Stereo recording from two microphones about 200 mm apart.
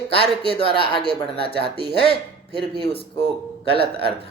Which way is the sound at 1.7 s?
55° right (ahead or behind).